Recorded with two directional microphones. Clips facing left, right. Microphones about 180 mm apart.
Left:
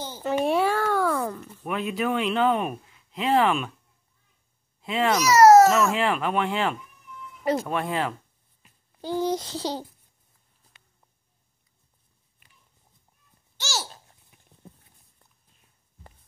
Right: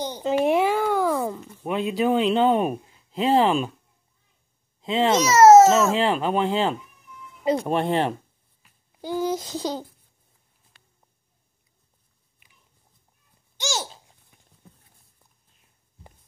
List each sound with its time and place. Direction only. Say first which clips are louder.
0.0 s a sound: right 3 dB; 15° right (ahead or behind)
1.7 s a man's voice: right 4 dB; 30° right (ahead or behind)
4.8 s speech: right 2 dB; 25° right (ahead or behind)
9.0 s speech: even; 10° right (ahead or behind)
13.6 s babbling: right 4 dB; 20° right (ahead or behind)